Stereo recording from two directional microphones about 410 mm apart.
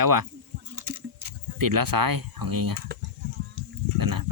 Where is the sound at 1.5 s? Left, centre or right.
Right.